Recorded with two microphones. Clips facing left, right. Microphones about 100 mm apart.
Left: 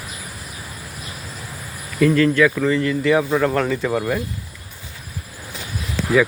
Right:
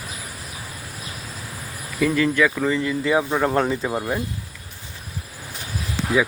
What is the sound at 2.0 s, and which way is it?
Speech, 15° right (ahead or behind).